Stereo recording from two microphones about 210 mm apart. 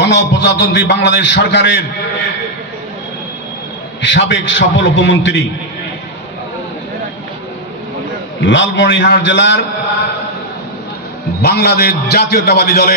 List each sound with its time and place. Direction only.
0.0 s a man's voice: 55° left (ahead or behind)
4.0 s a man's voice: 60° left (ahead or behind)
8.5 s a man's voice: 60° left (ahead or behind)
11.4 s a man's voice: 50° left (ahead or behind)